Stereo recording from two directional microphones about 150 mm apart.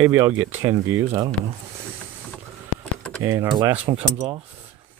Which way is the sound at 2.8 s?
10° left (ahead or behind).